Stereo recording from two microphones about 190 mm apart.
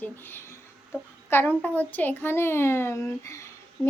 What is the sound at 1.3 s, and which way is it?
Speech, 10° left (ahead or behind).